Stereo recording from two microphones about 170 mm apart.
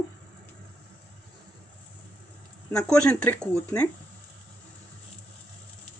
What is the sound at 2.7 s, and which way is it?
Speech, 5° left (ahead or behind).